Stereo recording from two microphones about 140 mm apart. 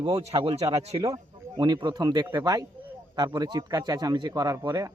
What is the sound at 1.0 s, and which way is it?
Speech, 30° right (ahead or behind).